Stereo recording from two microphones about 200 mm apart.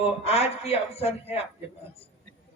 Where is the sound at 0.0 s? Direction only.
30° left (ahead or behind).